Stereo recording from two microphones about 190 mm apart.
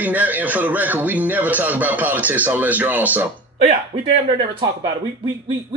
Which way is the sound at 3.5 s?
25° right (ahead or behind).